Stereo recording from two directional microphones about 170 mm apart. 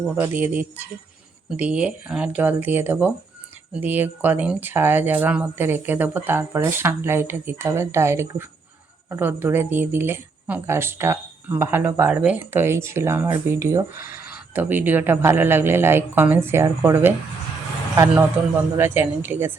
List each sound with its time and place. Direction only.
0.2 s speech: 10° right (ahead or behind)
13.9 s a sound: 55° left (ahead or behind)
14.3 s speech: 10° right (ahead or behind)